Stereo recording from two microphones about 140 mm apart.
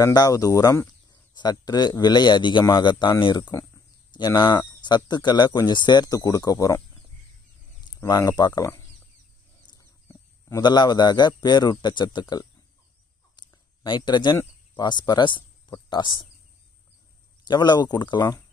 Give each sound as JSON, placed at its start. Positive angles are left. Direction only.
{"t": 0.0, "sound": "speech", "side_deg": 25}
{"t": 8.0, "sound": "speech", "side_deg": 25}
{"t": 10.5, "sound": "a man's voice", "side_deg": 30}
{"t": 13.4, "sound": "a sound", "side_deg": 30}
{"t": 14.3, "sound": "a sound", "side_deg": 15}
{"t": 14.8, "sound": "speech", "side_deg": 30}
{"t": 17.5, "sound": "a man's voice", "side_deg": 30}